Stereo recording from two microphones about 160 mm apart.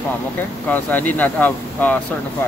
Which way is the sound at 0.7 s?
10° left (ahead or behind).